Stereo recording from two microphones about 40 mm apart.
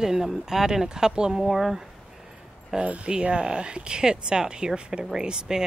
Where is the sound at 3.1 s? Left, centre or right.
Right.